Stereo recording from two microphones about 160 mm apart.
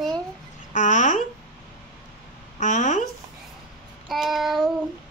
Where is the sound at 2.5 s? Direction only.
50° left (ahead or behind).